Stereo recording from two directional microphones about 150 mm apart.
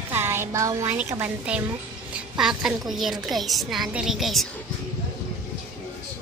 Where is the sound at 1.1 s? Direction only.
10° right (ahead or behind).